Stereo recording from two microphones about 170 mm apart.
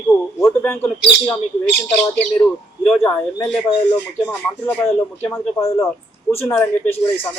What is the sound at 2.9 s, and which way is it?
Speech, 5° left (ahead or behind).